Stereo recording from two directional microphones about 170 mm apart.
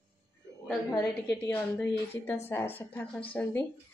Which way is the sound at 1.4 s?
15° left (ahead or behind).